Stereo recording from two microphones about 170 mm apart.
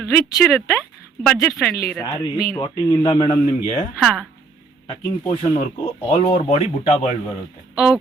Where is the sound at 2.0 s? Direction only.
20° left (ahead or behind).